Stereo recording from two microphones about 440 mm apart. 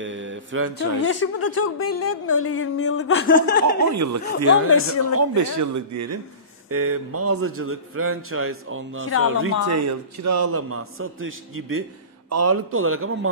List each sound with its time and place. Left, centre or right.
0.0 s mantra: right
0.7 s a woman's voice: left
3.9 s a man's voice: right
4.6 s a woman's voice: left
5.1 s a man's voice: right